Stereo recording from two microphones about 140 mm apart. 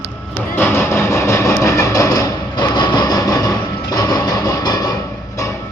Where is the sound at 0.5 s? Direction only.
15° left (ahead or behind).